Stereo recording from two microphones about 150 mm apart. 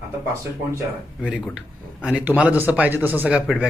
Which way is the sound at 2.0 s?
10° right (ahead or behind).